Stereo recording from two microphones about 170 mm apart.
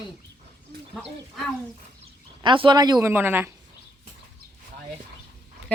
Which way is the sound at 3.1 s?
10° right (ahead or behind).